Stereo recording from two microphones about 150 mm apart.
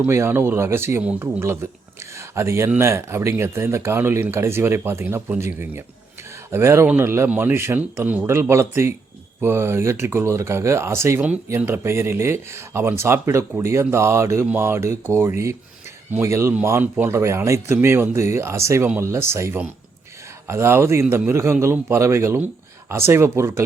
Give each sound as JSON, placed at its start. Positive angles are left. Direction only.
{"t": 0.0, "sound": "speech", "side_deg": -15}